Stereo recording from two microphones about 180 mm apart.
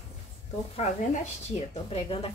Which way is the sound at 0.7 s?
40° left (ahead or behind).